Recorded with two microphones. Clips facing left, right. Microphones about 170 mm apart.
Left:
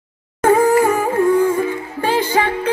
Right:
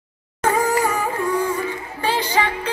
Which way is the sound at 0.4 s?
55° left (ahead or behind).